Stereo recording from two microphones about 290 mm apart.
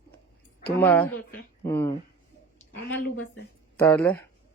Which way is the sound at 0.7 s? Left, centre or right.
Centre.